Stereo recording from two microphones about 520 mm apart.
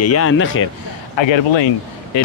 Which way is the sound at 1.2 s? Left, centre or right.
Left.